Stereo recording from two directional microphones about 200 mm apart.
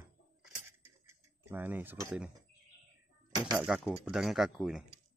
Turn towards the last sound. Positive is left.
turn(degrees=0)  # may be behind; listen again after turning